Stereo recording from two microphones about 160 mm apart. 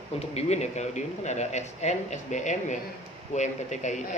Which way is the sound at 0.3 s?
45° left (ahead or behind).